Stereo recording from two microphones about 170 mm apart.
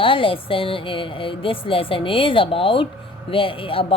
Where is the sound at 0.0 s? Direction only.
30° left (ahead or behind).